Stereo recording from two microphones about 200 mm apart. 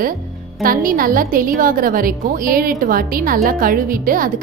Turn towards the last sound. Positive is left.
turn(degrees=-45)  # may be behind; listen again after turning